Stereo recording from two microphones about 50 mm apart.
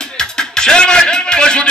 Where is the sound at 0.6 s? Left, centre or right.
Centre.